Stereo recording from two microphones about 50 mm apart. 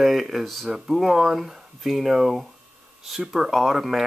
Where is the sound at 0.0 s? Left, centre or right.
Centre.